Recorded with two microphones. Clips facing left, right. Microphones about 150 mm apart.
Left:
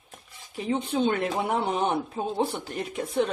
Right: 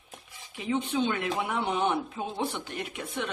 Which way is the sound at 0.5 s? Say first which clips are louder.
Left 2 dB; 35° left (ahead or behind).